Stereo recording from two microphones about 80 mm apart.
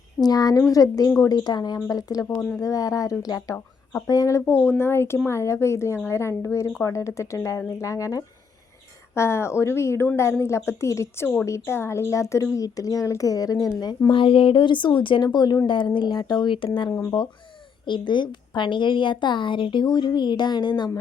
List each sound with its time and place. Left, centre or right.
0.2 s speech: left
9.1 s speech: left
14.1 s speech: left
15.6 s speech: left
17.8 s a woman's voice: left